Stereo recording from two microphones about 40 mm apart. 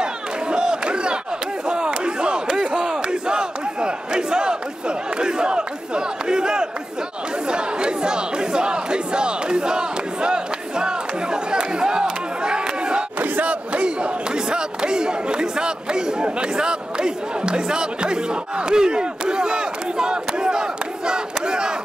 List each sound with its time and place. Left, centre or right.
0.0 s crowd: right
1.7 s battle cry: right
11.5 s crowd: right
13.2 s battle cry: right
13.7 s chatter: right
21.5 s a sound: right